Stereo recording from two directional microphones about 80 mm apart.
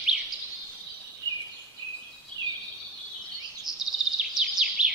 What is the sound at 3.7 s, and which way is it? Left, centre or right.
Bird vocalization, centre.